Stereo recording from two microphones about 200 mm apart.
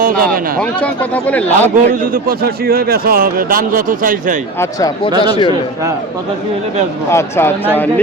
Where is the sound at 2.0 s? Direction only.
50° right (ahead or behind).